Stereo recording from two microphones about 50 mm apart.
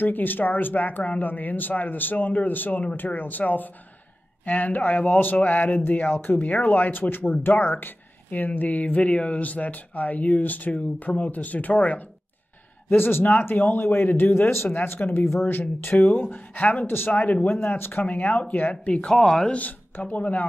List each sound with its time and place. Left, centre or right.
0.0 s speech: left
5.9 s speech: left
6.4 s speech: left
12.9 s speech: left
14.3 s speech: left
14.7 s speech: left
16.8 s speech: left
18.0 s speech: left
19.0 s speech: centre
19.5 s speech: left